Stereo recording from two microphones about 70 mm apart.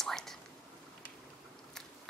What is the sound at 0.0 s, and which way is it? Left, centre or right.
Whispering, centre.